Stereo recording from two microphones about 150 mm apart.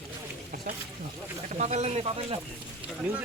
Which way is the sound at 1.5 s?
50° right (ahead or behind).